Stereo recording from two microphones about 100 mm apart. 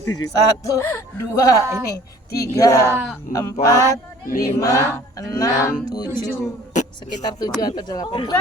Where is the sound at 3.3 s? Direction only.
35° left (ahead or behind).